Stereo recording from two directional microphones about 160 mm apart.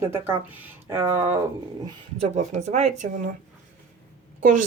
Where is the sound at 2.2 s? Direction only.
45° right (ahead or behind).